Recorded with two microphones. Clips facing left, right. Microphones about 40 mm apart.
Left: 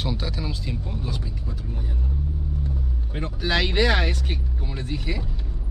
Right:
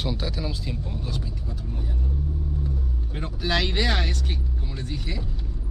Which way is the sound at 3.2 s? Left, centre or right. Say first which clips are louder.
Left 2 dB; centre.